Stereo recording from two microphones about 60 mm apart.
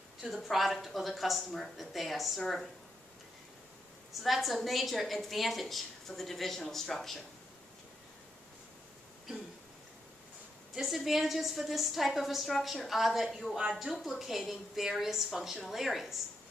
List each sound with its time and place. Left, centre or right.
0.2 s a woman's voice: centre
4.1 s a woman's voice: centre
10.7 s a woman's voice: centre